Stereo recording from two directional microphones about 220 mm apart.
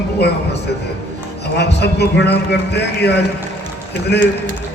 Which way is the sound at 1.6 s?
50° left (ahead or behind).